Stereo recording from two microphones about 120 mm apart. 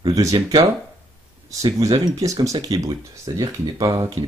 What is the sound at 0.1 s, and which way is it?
Speech, 30° right (ahead or behind).